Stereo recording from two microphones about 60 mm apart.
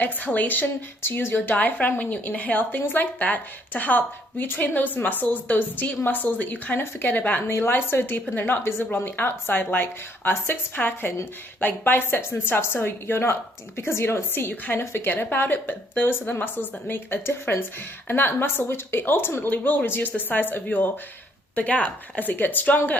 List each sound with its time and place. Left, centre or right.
0.0 s a woman's voice: left
6.7 s a woman's voice: left